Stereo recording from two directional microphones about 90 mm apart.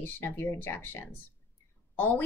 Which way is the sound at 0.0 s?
25° left (ahead or behind).